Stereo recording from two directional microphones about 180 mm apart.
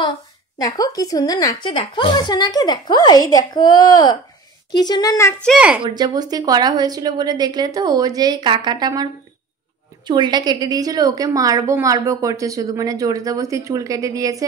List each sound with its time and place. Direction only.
0.6 s a woman's voice: 20° left (ahead or behind)
5.5 s a woman's voice: 5° right (ahead or behind)
5.9 s a woman's voice: 20° right (ahead or behind)